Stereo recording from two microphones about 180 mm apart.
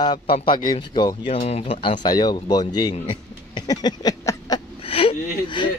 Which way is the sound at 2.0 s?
20° left (ahead or behind).